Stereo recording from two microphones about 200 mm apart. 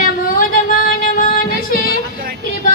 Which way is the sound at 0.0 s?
45° left (ahead or behind).